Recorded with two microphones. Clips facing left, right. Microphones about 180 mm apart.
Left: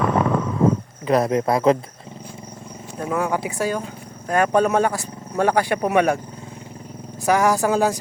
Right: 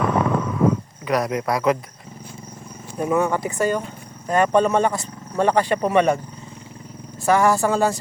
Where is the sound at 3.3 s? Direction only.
5° left (ahead or behind).